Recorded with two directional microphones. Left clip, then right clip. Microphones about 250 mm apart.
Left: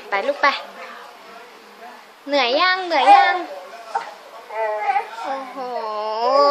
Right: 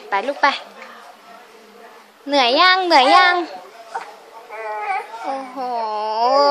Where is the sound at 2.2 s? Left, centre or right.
Right.